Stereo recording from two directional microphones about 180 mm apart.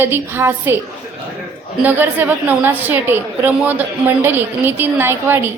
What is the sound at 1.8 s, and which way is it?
A woman's voice, 10° right (ahead or behind).